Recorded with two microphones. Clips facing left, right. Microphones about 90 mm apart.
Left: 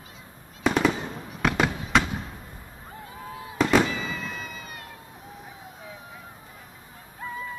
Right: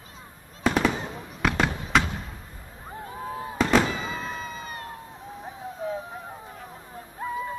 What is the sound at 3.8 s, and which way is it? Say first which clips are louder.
Fireworks: right 1 dB; 40° right (ahead or behind).